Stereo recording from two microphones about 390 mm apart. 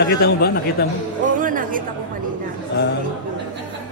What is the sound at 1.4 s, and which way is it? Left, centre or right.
Chatter, right.